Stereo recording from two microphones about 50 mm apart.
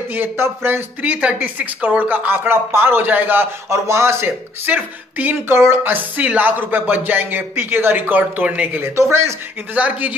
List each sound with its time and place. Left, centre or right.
0.1 s a sound: right
1.0 s speech: right
3.7 s speech: right
4.6 s speech: right
5.5 s speech: right
5.9 s speech: right